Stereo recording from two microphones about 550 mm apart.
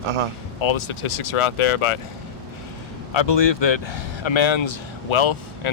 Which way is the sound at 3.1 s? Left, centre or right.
Left.